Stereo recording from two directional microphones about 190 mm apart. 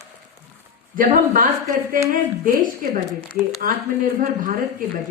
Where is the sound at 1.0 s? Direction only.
45° right (ahead or behind).